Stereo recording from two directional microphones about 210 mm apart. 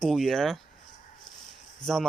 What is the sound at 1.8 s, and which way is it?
Speech, centre (ahead or behind).